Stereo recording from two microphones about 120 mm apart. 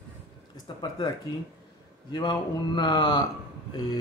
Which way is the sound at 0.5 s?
40° left (ahead or behind).